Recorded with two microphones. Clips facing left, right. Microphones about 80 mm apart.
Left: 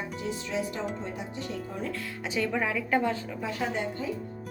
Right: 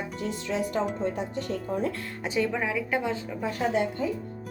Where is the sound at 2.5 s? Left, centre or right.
Centre.